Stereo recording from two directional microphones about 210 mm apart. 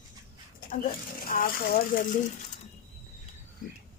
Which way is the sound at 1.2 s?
40° left (ahead or behind).